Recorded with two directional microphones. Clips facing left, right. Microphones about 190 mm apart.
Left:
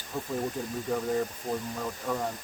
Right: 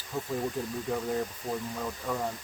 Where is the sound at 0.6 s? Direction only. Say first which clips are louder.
Right 1 dB; centre (ahead or behind).